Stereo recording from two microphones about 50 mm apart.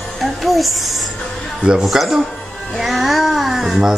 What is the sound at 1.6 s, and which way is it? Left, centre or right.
Speech, centre.